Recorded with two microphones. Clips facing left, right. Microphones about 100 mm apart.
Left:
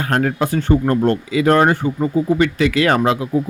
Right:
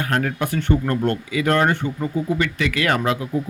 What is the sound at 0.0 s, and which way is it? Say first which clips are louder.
Speech: left 4 dB; 40° left (ahead or behind).